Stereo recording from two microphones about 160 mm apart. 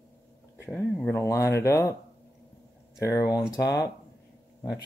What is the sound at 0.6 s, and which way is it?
Speech, 10° left (ahead or behind).